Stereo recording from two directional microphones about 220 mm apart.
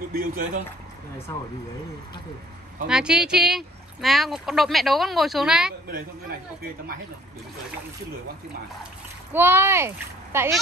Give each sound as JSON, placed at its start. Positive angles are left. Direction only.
{"t": 0.1, "sound": "speech", "side_deg": -40}
{"t": 1.3, "sound": "speech", "side_deg": 15}
{"t": 2.9, "sound": "speech", "side_deg": -5}
{"t": 9.3, "sound": "a child's voice", "side_deg": -10}